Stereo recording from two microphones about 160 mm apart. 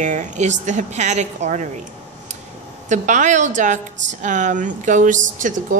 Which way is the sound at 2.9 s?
50° right (ahead or behind).